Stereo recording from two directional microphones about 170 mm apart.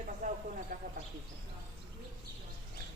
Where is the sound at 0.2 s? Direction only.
45° right (ahead or behind).